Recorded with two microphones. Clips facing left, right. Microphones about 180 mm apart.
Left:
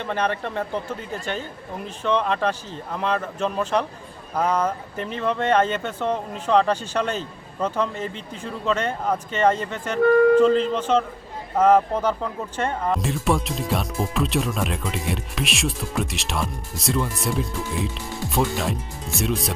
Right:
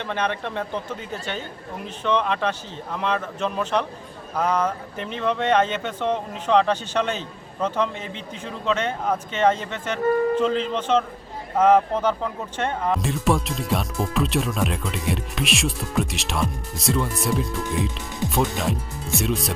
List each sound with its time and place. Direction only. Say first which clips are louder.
0.0 s speech: left 1 dB; 5° left (ahead or behind)
2.0 s speech: left 1 dB; 5° left (ahead or behind)